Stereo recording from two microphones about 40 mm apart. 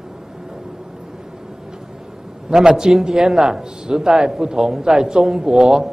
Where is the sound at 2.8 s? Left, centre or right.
Centre.